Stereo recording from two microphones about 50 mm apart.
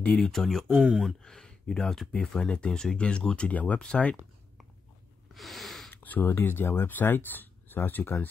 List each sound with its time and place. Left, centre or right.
0.2 s speech: centre; by 3.8 s left
5.3 s snort: centre
5.9 s speech: left